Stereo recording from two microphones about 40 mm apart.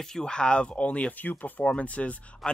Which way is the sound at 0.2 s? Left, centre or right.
Left.